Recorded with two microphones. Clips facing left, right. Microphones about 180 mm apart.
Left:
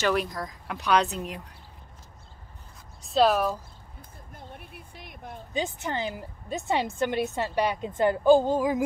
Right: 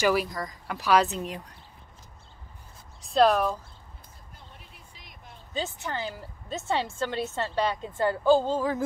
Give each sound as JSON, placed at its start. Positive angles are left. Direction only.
{"t": 0.0, "sound": "speech", "side_deg": -5}
{"t": 3.0, "sound": "speech", "side_deg": 0}
{"t": 4.6, "sound": "a sound", "side_deg": 55}
{"t": 5.5, "sound": "a woman's voice", "side_deg": 15}